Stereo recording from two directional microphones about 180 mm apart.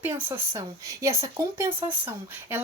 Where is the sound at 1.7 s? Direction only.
30° right (ahead or behind).